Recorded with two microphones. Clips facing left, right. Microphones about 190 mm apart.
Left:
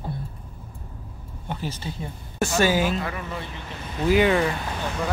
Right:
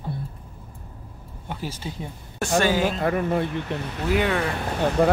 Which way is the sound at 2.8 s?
50° right (ahead or behind).